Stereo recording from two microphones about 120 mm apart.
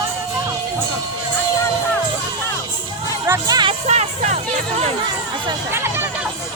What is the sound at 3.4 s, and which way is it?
Music, 35° right (ahead or behind).